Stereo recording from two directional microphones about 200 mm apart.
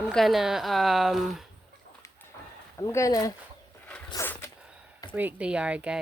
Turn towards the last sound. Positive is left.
turn(degrees=-5)  # may be behind; listen again after turning